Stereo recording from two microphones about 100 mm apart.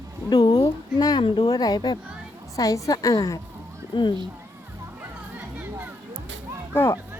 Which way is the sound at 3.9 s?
55° left (ahead or behind).